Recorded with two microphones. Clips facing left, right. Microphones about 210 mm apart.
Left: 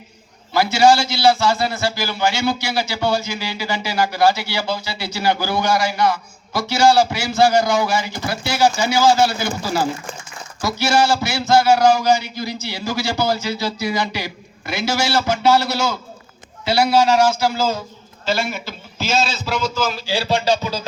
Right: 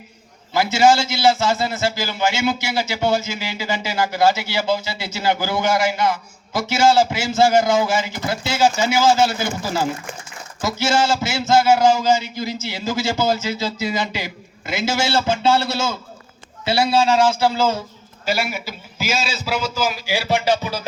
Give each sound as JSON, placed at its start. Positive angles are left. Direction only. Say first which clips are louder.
{"t": 0.5, "sound": "a man's voice", "louder": "left 1 dB", "side_deg": -20}
{"t": 18.3, "sound": "speech", "louder": "left 1 dB", "side_deg": -10}